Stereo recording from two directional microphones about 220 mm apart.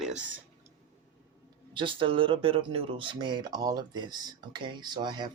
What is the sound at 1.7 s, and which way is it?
Speech, 20° right (ahead or behind).